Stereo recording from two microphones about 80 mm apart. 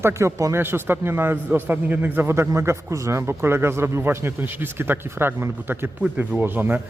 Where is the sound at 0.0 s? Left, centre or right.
Right.